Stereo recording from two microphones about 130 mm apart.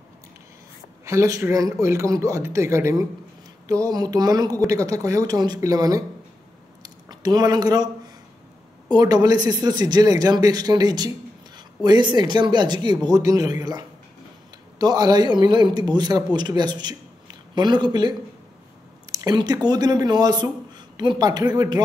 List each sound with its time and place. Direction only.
1.0 s speech: 25° right (ahead or behind)
6.8 s a sound: 30° right (ahead or behind)
8.8 s speech: 30° right (ahead or behind)
19.1 s speech: 30° right (ahead or behind)